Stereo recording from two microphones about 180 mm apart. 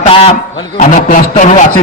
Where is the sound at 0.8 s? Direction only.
45° left (ahead or behind).